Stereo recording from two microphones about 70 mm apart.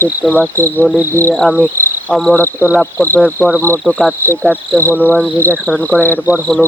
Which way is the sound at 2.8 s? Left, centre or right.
Left.